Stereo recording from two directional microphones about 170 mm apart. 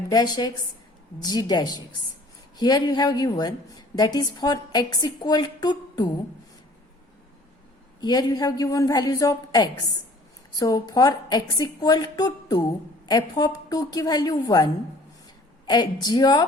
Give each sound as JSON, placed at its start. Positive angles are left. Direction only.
{"t": 0.1, "sound": "a woman's voice", "side_deg": 25}
{"t": 8.0, "sound": "a woman's voice", "side_deg": 25}